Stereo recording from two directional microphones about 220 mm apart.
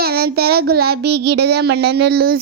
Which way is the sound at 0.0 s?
45° right (ahead or behind).